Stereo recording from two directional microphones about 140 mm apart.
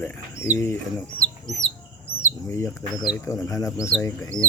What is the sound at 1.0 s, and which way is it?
Chicken, 5° left (ahead or behind).